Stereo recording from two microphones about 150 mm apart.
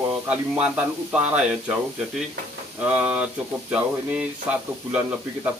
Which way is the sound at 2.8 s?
10° right (ahead or behind).